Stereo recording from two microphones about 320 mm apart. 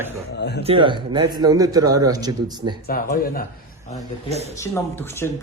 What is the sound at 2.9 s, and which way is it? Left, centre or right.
Speech, left.